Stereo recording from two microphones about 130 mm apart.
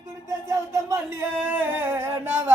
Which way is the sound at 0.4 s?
25° right (ahead or behind).